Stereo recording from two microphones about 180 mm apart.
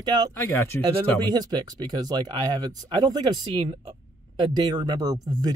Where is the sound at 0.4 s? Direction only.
15° left (ahead or behind).